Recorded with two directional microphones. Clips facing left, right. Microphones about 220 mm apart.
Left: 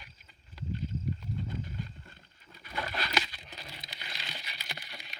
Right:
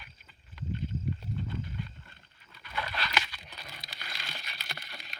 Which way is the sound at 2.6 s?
40° left (ahead or behind).